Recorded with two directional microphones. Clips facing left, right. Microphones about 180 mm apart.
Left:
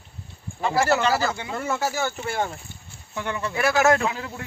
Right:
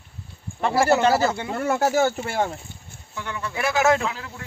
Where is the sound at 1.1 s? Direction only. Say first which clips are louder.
Right 3 dB; 25° right (ahead or behind).